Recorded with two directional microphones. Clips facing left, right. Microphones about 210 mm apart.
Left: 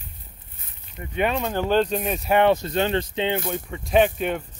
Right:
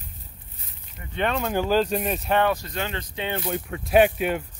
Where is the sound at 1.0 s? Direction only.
30° left (ahead or behind).